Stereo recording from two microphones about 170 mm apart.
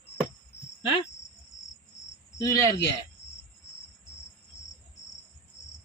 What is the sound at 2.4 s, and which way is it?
Speech, 20° left (ahead or behind).